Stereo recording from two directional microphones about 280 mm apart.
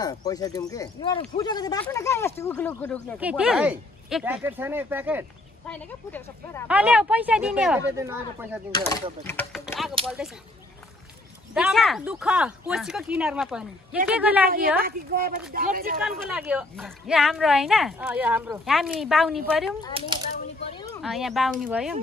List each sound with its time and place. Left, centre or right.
0.0 s speech: centre
3.2 s a woman's voice: centre
5.7 s speech: centre
6.7 s a woman's voice: centre
8.7 s speech: centre
9.2 s a sound: centre
10.0 s a woman's voice: centre
11.5 s a woman's voice: centre
14.8 s a woman's voice: right
16.0 s a woman's voice: centre
20.0 s a child's voice: centre
21.0 s a woman's voice: centre